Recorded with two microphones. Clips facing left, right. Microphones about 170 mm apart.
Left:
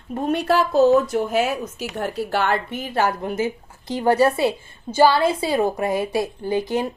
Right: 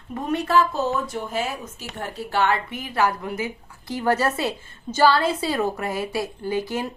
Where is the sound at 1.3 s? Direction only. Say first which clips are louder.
Left 6 dB; 70° left (ahead or behind).